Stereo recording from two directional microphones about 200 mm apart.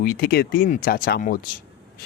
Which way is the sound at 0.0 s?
50° left (ahead or behind).